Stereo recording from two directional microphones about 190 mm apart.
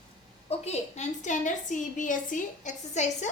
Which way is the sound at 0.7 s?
40° left (ahead or behind).